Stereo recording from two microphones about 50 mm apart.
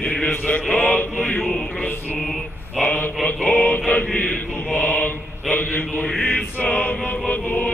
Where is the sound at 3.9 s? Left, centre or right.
Left.